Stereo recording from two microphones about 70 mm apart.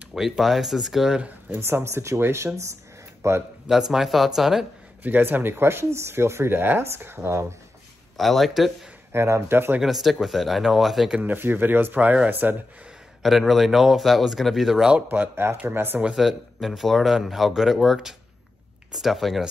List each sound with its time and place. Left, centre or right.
0.1 s speech: centre
1.6 s speech: right
3.9 s speech: centre
5.0 s speech: right
8.2 s speech: centre
9.1 s speech: right
9.8 s speech: centre
11.1 s speech: centre
11.3 s speech: right
13.2 s speech: centre
15.0 s speech: right
16.2 s speech: centre